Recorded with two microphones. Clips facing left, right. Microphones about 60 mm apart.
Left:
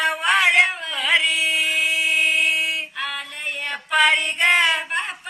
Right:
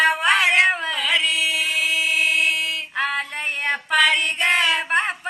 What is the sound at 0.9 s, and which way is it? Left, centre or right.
Chant, left.